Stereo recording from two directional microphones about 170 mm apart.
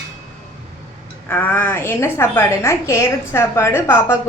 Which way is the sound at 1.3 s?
10° left (ahead or behind).